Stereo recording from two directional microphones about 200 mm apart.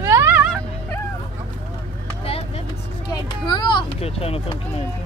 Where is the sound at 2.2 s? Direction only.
30° left (ahead or behind).